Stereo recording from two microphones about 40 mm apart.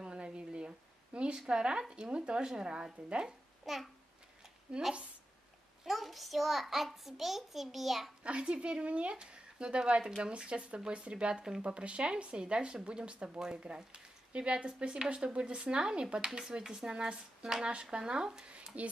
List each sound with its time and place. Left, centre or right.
0.0 s a sound: right
1.5 s speech: right
3.6 s a child's voice: centre
4.7 s speech: right
5.9 s a child's voice: centre
8.2 s speech: right
18.8 s speech: right